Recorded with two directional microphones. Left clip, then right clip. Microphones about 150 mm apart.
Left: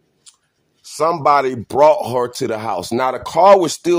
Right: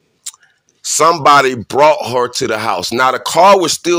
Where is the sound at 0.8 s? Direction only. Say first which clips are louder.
Right 7 dB; 15° right (ahead or behind).